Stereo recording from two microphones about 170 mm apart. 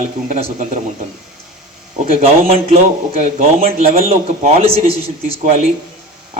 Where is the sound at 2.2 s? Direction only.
35° right (ahead or behind).